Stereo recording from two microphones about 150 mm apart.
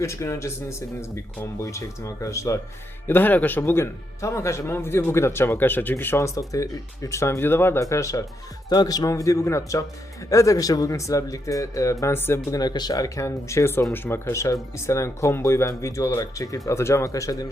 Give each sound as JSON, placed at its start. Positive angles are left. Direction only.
{"t": 0.0, "sound": "speech", "side_deg": 20}